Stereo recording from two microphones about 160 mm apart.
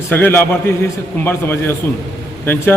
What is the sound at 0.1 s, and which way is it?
A man's voice, 10° left (ahead or behind).